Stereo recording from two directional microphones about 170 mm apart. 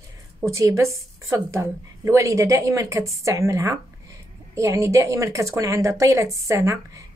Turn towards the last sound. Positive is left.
turn(degrees=-15)  # may be behind; listen again after turning